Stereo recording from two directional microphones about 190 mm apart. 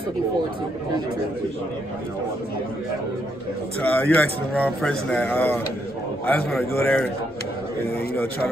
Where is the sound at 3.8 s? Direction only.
5° left (ahead or behind).